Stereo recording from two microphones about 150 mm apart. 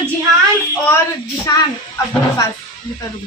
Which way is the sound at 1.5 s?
20° left (ahead or behind).